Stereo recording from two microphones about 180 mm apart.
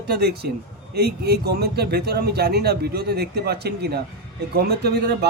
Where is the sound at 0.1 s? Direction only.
60° right (ahead or behind).